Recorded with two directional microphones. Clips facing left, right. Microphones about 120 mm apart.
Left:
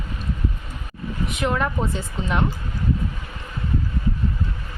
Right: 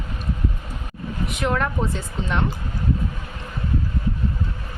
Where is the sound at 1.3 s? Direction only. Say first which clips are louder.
Even; centre (ahead or behind).